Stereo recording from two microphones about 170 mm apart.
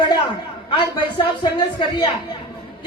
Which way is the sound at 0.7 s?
30° left (ahead or behind).